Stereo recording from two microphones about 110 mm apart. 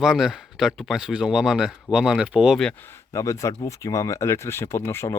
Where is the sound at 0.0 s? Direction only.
5° right (ahead or behind).